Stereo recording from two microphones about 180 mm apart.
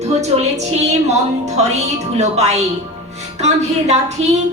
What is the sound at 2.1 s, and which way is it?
A woman's voice, 35° right (ahead or behind).